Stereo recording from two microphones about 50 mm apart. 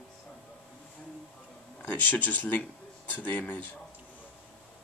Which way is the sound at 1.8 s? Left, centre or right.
Left.